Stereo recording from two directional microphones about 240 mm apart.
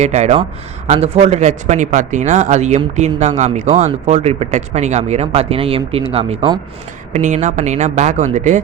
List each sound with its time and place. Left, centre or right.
0.0 s speech: right